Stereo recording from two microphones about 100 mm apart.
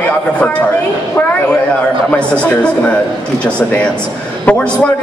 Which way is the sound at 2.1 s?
10° left (ahead or behind).